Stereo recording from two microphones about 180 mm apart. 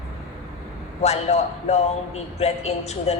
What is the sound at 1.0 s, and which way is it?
A man's voice, 35° left (ahead or behind).